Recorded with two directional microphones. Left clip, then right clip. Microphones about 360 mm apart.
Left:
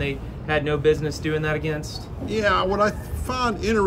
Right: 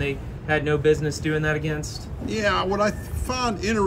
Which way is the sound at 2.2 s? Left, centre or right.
Centre.